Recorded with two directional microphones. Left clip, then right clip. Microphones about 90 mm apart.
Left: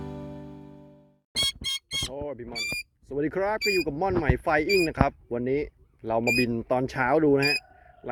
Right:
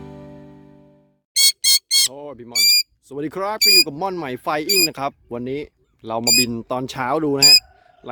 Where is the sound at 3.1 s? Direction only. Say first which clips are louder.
Left 1 dB; 40° right (ahead or behind).